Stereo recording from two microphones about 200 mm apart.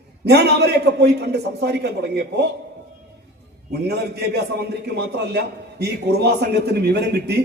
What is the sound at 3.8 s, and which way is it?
A man's voice, 55° right (ahead or behind).